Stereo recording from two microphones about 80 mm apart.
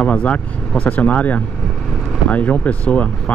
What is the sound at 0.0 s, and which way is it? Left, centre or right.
Speech, centre.